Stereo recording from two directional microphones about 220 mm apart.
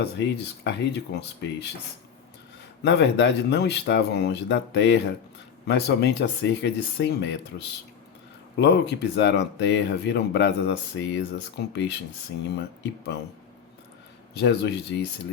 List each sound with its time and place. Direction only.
0.0 s speech: 50° left (ahead or behind)
2.8 s speech: 50° left (ahead or behind)
14.4 s speech: 50° left (ahead or behind)